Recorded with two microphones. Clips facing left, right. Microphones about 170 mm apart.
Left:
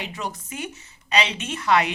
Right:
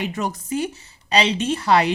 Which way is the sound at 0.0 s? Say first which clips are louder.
Right 6 dB; 45° right (ahead or behind).